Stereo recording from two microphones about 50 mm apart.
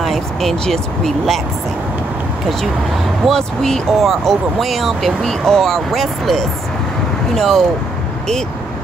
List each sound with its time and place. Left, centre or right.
0.0 s speech: centre
3.3 s speech: centre